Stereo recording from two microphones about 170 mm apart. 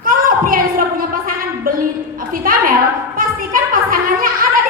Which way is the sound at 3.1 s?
55° right (ahead or behind).